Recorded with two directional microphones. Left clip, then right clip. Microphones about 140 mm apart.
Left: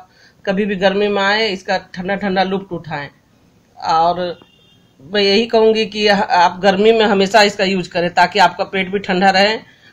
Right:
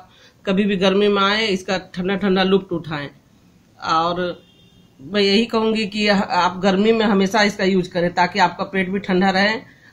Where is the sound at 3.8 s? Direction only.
40° left (ahead or behind).